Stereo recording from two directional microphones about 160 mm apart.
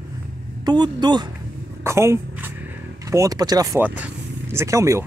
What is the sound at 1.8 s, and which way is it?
Speech, 15° right (ahead or behind).